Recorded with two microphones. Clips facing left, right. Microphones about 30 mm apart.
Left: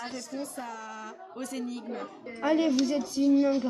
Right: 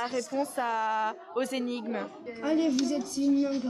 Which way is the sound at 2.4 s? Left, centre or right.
Centre.